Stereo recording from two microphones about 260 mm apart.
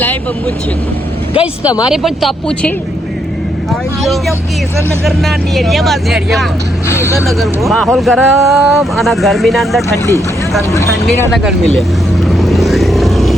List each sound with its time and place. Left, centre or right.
0.0 s speech: centre
1.3 s speech: centre
1.9 s speech: centre
5.0 s speech: centre
7.1 s speech: centre
11.0 s speech: centre
12.3 s vehicle: centre